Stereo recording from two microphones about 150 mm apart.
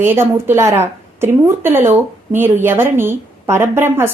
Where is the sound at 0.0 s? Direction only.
15° right (ahead or behind).